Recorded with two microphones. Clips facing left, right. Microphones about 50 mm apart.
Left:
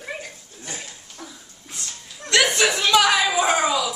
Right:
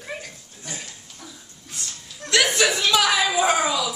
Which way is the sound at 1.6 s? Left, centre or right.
Centre.